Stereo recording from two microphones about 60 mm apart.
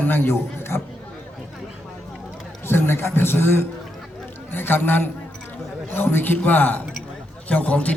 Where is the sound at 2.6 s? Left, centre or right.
Left.